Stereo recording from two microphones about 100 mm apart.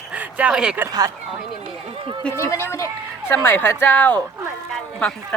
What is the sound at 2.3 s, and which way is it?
Speech, 30° left (ahead or behind).